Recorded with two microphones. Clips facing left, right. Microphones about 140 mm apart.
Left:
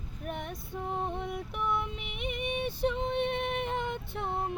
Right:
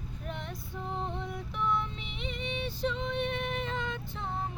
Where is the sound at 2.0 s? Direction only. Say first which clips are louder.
Left 3 dB; 55° left (ahead or behind).